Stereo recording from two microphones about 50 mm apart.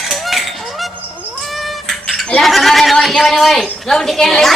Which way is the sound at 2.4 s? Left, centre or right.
Centre.